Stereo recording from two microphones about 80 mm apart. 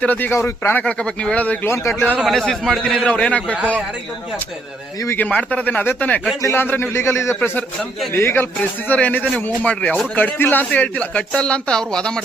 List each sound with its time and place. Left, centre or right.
0.0 s a man's voice: left
0.3 s a man's voice: left
0.8 s speech: centre
1.6 s a man's voice: left
2.2 s speech: centre
5.1 s a man's voice: centre
6.4 s a man's voice: left; by 12.2 s centre